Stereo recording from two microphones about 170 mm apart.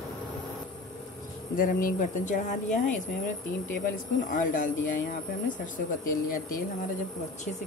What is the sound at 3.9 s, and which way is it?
Speech, 50° left (ahead or behind).